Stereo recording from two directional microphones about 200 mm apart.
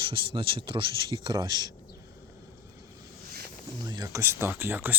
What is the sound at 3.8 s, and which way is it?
Speech, 15° right (ahead or behind).